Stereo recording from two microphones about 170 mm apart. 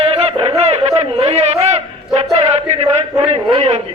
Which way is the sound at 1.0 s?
35° right (ahead or behind).